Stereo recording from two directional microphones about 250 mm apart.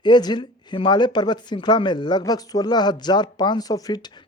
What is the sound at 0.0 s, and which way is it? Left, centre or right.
Speech, centre.